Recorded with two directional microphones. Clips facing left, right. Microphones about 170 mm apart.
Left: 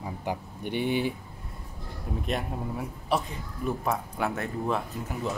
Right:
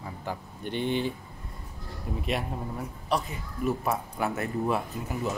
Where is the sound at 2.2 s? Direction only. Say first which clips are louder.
Even; centre (ahead or behind).